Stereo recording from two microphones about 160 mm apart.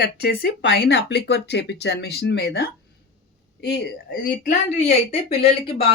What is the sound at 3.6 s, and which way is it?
Speech, 70° left (ahead or behind).